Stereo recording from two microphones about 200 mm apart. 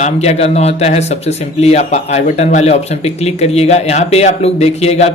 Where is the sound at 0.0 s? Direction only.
30° left (ahead or behind).